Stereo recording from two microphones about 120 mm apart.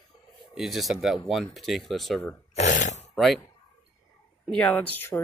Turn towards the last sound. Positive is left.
turn(degrees=15)  # may be behind; listen again after turning